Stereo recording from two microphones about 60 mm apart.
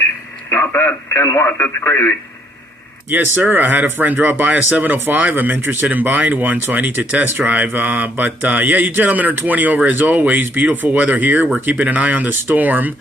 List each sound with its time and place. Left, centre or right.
0.5 s speech: left
3.1 s speech: right